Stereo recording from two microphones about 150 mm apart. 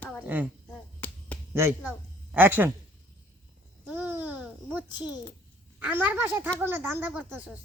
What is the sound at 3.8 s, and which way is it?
Babbling, 10° right (ahead or behind).